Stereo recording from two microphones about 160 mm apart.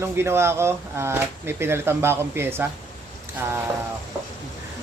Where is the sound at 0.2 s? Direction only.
15° right (ahead or behind).